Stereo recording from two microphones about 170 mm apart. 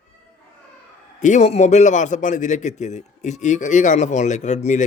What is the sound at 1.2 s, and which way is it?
A man's voice, 45° left (ahead or behind).